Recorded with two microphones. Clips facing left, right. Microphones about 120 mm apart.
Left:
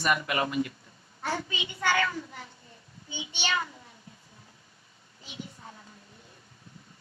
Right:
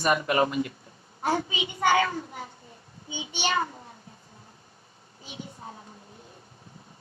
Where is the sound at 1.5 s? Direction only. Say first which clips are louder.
Right 5 dB; 15° right (ahead or behind).